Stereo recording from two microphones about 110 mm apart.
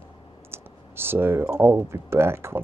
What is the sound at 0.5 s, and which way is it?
Speech, 20° right (ahead or behind).